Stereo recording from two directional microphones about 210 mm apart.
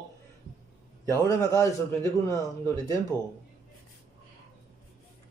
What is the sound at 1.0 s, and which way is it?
A man's voice, 15° left (ahead or behind).